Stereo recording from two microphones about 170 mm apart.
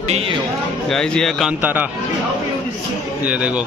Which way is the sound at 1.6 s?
10° right (ahead or behind).